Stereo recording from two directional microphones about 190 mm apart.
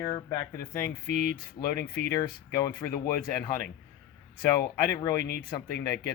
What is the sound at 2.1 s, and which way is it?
Speech, 20° left (ahead or behind).